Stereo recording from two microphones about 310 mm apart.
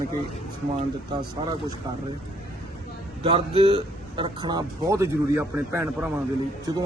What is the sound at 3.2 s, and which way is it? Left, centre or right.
Speech, centre.